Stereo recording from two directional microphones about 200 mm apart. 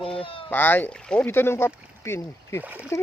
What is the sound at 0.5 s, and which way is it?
Speech, 10° left (ahead or behind).